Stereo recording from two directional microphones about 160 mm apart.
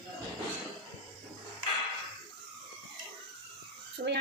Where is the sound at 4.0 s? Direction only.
50° right (ahead or behind).